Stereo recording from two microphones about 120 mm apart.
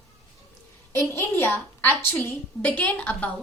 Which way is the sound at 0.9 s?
20° left (ahead or behind).